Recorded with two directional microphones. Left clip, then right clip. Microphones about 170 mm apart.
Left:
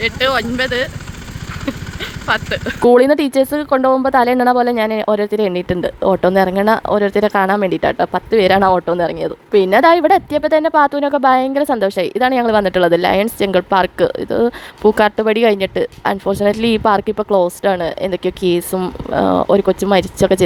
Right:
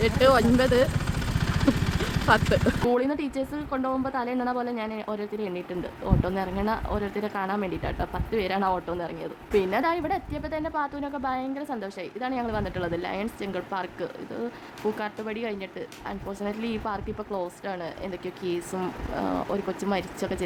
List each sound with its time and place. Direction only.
0.0 s speech: centre (ahead or behind)
2.2 s speech: centre (ahead or behind)
2.8 s speech: 40° left (ahead or behind)